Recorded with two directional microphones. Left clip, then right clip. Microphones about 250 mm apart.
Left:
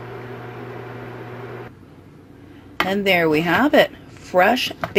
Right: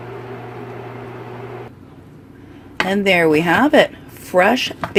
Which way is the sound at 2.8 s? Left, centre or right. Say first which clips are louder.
Right 3 dB; right.